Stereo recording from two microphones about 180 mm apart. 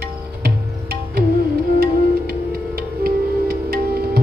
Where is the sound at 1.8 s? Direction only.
60° right (ahead or behind).